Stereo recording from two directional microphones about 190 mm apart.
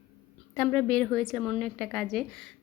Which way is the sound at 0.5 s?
10° left (ahead or behind).